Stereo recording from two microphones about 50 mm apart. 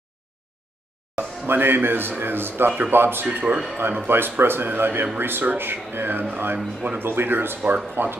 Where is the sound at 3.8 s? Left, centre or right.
Right.